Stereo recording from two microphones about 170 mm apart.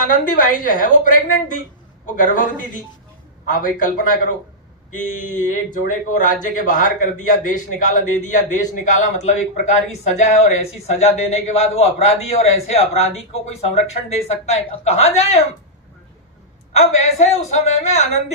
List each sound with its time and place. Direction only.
0.0 s a man's voice: 55° left (ahead or behind)
16.7 s a man's voice: 40° left (ahead or behind)